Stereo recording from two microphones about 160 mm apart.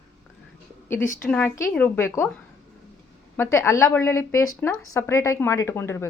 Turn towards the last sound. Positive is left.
turn(degrees=15)  # may be behind; listen again after turning